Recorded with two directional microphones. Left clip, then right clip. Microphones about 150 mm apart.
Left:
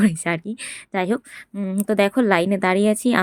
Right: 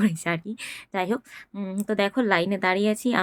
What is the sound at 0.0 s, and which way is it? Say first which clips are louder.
Speech: left 4 dB; 30° left (ahead or behind).